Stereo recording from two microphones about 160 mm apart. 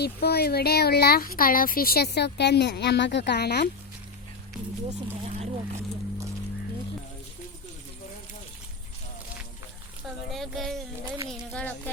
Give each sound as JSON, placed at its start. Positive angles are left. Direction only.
{"t": 0.0, "sound": "speech", "side_deg": 85}
{"t": 4.9, "sound": "speech", "side_deg": -45}
{"t": 10.3, "sound": "a sound", "side_deg": 0}